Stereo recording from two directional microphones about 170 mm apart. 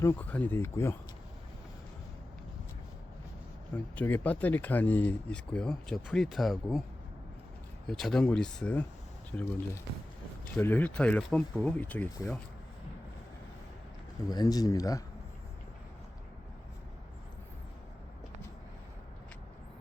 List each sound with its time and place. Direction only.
0.0 s speech: 10° left (ahead or behind)
3.9 s speech: 10° left (ahead or behind)
7.9 s speech: 5° left (ahead or behind)
14.3 s speech: 20° left (ahead or behind)